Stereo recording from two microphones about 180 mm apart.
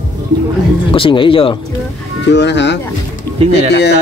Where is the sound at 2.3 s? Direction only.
75° left (ahead or behind).